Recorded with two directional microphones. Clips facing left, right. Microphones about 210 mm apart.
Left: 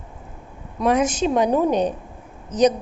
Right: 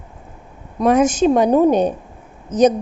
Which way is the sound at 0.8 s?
45° right (ahead or behind).